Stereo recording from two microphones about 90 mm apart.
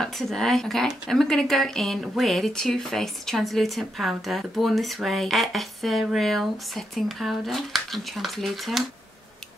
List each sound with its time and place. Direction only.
0.0 s speech: 5° left (ahead or behind)